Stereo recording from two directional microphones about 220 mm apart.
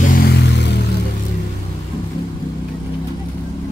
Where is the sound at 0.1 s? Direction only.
50° left (ahead or behind).